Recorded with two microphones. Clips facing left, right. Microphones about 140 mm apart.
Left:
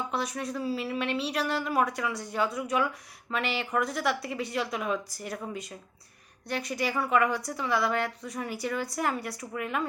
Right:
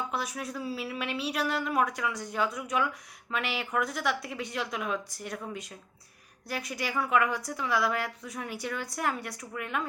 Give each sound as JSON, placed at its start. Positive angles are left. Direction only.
{"t": 0.1, "sound": "speech", "side_deg": 0}